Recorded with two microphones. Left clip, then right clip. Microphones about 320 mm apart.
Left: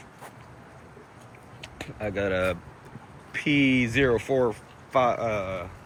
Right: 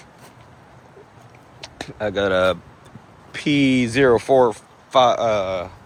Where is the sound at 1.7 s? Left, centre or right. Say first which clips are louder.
Right 8 dB; centre.